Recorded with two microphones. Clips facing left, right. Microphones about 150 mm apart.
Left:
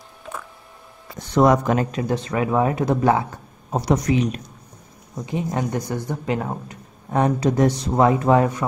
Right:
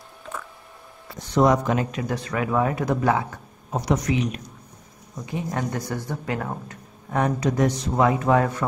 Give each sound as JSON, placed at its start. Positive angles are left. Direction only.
{"t": 1.3, "sound": "speech", "side_deg": 60}
{"t": 1.9, "sound": "speech", "side_deg": 30}
{"t": 5.2, "sound": "speech", "side_deg": 20}